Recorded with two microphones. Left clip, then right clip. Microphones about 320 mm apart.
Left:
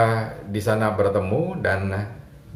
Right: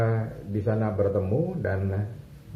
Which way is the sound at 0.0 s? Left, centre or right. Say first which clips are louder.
Left 8 dB; left.